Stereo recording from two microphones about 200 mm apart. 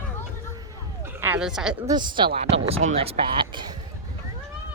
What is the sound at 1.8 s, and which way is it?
Speech, 20° right (ahead or behind).